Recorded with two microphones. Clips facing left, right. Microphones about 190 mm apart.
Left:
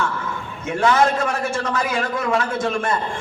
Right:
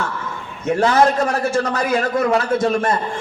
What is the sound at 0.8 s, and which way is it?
A man's voice, 35° right (ahead or behind).